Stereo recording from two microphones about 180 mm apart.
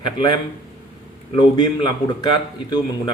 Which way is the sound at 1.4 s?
25° left (ahead or behind).